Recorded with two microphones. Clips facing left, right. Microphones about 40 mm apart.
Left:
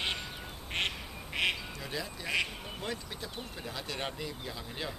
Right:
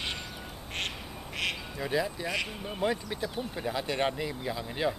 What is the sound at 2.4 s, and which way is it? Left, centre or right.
Speech, centre.